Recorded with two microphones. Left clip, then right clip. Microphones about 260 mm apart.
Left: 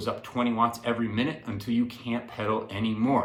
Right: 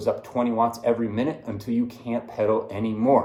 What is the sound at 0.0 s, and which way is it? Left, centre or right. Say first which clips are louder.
Speech: right 5 dB; left.